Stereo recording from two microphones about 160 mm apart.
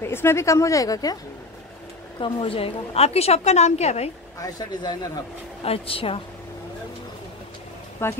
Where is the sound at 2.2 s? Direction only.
35° left (ahead or behind).